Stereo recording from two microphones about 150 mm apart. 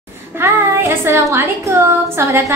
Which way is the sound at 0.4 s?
15° right (ahead or behind).